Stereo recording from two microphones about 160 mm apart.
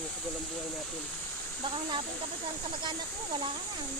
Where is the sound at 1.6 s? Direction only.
30° right (ahead or behind).